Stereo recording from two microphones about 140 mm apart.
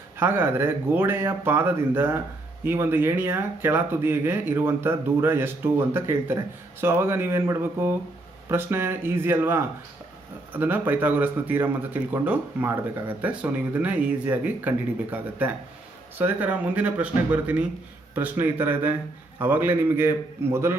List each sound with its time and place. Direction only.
0.2 s speech: 15° right (ahead or behind)